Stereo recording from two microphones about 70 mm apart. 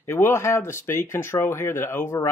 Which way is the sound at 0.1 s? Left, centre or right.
Left.